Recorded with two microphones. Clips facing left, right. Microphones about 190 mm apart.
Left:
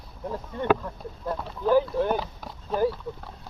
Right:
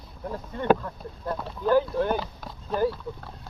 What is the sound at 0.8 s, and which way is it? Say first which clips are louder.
Speech: even; 10° left (ahead or behind).